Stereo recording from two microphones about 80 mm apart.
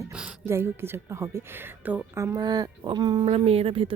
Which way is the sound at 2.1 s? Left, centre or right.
Right.